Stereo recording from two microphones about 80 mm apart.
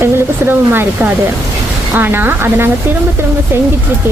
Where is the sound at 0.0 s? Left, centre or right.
Right.